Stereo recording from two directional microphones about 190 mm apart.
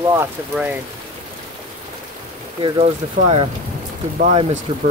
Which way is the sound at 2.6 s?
30° right (ahead or behind).